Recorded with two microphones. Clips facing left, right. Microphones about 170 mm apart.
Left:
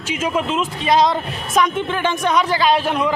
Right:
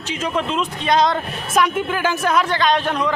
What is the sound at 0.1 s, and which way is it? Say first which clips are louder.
Speech: left 2 dB; 5° left (ahead or behind).